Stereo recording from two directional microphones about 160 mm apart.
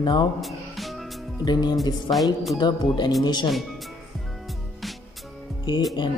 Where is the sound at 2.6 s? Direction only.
25° left (ahead or behind).